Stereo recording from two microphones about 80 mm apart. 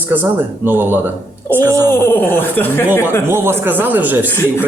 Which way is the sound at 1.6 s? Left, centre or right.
Right.